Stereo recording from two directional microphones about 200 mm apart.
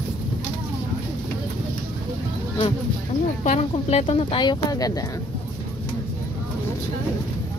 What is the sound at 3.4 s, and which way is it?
Speech, 35° left (ahead or behind).